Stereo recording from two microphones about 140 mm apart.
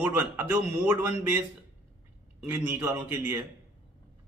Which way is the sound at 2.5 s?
15° right (ahead or behind).